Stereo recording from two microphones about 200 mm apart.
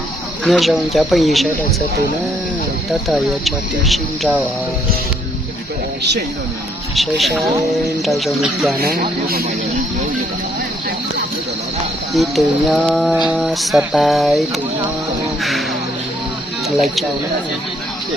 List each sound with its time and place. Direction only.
0.4 s speech: centre (ahead or behind)
3.1 s speech: centre (ahead or behind)
6.9 s speech: centre (ahead or behind)
8.8 s speech: 50° right (ahead or behind)
12.1 s speech: centre (ahead or behind)
15.4 s music: centre (ahead or behind)
16.6 s speech: centre (ahead or behind)